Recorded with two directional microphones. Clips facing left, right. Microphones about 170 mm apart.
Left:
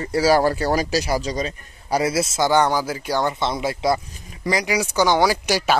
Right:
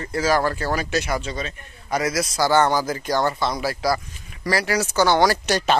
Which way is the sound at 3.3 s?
25° left (ahead or behind).